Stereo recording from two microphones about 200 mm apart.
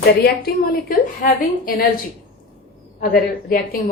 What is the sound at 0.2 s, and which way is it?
A woman's voice, 50° left (ahead or behind).